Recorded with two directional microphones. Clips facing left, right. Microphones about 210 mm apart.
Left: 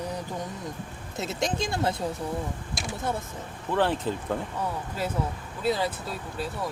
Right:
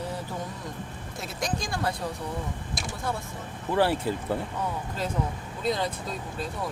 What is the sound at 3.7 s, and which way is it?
Speech, 10° right (ahead or behind).